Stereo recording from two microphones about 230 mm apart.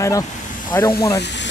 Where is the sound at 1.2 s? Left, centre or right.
Left.